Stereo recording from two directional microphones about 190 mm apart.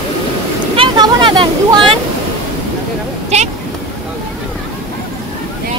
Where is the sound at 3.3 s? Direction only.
35° right (ahead or behind).